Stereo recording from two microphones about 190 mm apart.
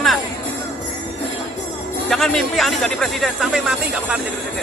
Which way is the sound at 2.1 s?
Centre (ahead or behind).